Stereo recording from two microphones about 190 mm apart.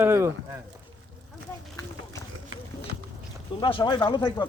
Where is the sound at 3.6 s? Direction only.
25° left (ahead or behind).